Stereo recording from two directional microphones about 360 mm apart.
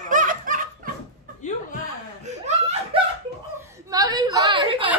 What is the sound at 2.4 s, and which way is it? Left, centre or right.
Laughter, centre.